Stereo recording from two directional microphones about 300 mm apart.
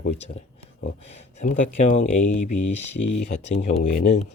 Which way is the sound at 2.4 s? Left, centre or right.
Left.